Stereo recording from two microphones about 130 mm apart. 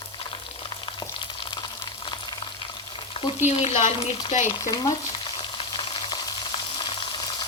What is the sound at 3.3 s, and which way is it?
Speech, 60° left (ahead or behind).